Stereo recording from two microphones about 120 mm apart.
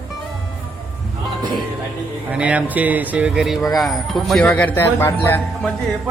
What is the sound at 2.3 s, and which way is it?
Speech, 10° right (ahead or behind).